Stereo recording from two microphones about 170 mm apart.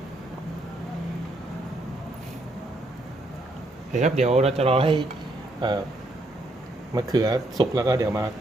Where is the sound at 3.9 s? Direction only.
45° right (ahead or behind); by 5.8 s 25° right (ahead or behind).